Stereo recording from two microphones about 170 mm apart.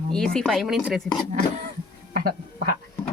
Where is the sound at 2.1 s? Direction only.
60° right (ahead or behind).